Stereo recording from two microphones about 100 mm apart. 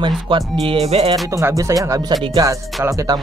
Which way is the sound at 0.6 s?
80° right.